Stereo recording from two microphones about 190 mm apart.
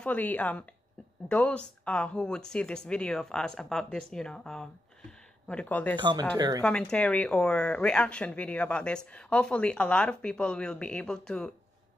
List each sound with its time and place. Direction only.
0.0 s a woman's voice: 10° left (ahead or behind)
5.9 s speech: 25° right (ahead or behind)
6.6 s speech: 5° left (ahead or behind)